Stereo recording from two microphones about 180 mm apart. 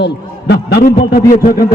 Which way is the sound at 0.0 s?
70° left (ahead or behind).